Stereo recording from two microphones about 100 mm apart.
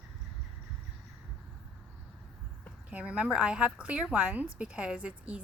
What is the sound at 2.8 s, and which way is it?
A woman's voice, 10° right (ahead or behind).